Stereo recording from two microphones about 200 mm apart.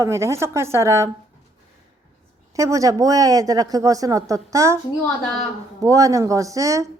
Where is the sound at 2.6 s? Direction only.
15° right (ahead or behind).